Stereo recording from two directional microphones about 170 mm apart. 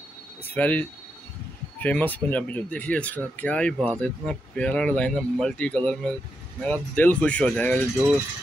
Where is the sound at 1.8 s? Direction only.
10° left (ahead or behind).